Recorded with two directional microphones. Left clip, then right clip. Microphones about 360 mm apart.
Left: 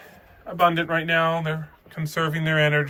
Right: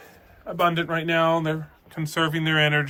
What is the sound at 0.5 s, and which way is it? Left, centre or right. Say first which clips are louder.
Speech: left 2 dB; centre.